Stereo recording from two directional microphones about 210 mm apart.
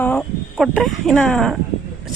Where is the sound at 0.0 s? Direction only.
5° left (ahead or behind).